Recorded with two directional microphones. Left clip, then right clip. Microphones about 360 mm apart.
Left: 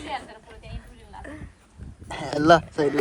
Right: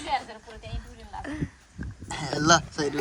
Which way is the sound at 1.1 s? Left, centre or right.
Right.